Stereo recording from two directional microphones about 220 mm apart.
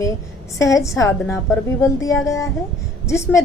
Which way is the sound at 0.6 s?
15° left (ahead or behind).